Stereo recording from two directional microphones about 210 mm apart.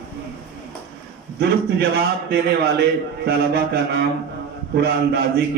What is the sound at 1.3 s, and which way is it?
A man's voice, 50° right (ahead or behind).